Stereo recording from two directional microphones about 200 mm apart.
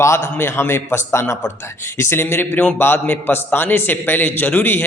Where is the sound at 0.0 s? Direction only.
10° left (ahead or behind).